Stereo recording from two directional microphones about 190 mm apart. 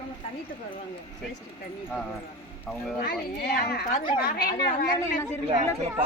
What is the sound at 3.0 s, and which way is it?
A child's voice, 55° left (ahead or behind).